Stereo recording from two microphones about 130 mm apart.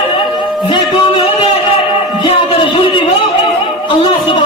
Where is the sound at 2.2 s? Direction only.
40° left (ahead or behind).